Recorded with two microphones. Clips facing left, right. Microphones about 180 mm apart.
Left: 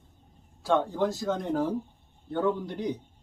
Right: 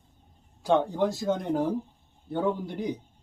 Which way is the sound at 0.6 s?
15° right (ahead or behind).